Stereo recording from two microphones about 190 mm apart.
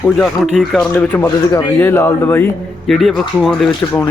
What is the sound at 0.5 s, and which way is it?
Speech, centre (ahead or behind).